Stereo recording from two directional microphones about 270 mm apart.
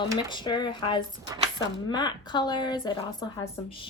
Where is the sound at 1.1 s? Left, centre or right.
Centre.